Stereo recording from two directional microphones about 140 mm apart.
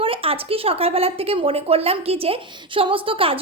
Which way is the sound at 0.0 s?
40° right (ahead or behind).